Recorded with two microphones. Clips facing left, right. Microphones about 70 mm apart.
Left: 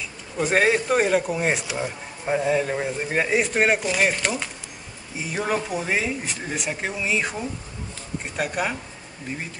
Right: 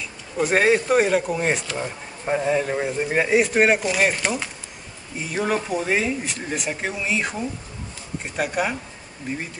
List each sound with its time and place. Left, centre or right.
0.4 s speech: centre